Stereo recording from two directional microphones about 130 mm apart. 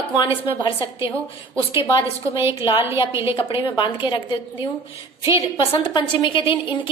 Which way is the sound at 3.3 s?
40° left (ahead or behind).